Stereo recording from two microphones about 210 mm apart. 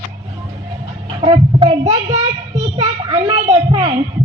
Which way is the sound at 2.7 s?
20° right (ahead or behind).